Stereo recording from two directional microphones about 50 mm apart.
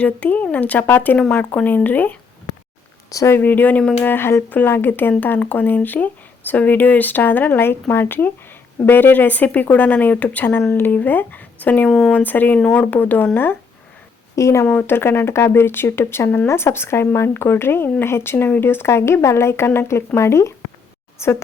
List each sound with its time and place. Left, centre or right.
0.0 s speech: left
0.9 s speech: left
3.3 s speech: left
5.4 s speech: left
10.7 s speech: left
11.9 s speech: centre
12.1 s speech: left
12.7 s speech: left
13.0 s speech: left
14.3 s speech: left
14.8 s speech: left
18.9 s speech: left
20.1 s a woman's voice: left